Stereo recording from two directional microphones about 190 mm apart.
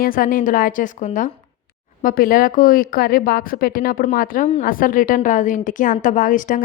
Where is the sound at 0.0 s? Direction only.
45° left (ahead or behind).